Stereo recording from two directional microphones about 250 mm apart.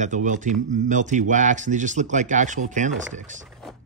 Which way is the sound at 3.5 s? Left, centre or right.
Centre.